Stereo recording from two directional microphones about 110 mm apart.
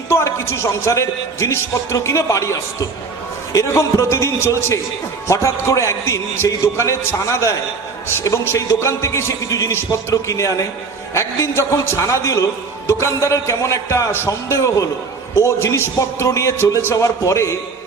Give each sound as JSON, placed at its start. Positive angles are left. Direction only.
{"t": 0.1, "sound": "a man's voice", "side_deg": 25}